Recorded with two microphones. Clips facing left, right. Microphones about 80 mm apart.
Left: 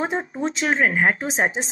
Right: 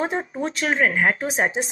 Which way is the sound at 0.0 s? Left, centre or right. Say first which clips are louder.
Even; centre.